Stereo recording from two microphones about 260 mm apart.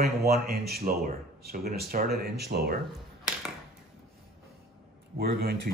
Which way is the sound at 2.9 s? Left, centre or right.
Centre.